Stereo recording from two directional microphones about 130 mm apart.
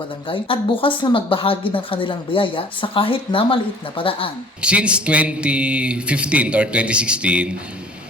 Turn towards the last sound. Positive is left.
turn(degrees=-10)  # may be behind; listen again after turning